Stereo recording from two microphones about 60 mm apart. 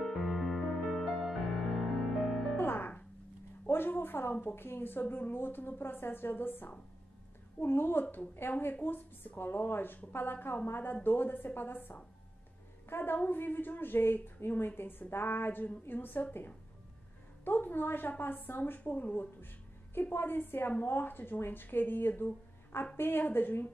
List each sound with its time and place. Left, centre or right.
0.0 s music: centre
2.5 s music: left
3.6 s a woman's voice: left